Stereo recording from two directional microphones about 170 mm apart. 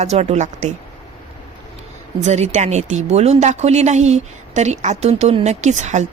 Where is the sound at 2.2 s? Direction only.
40° right (ahead or behind).